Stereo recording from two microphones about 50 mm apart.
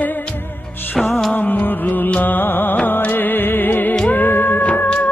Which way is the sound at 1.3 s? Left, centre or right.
Left.